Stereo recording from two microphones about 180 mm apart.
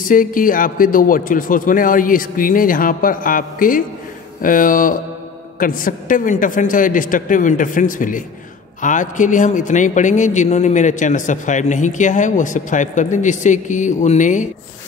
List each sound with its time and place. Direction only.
0.0 s a man's voice: 50° left (ahead or behind)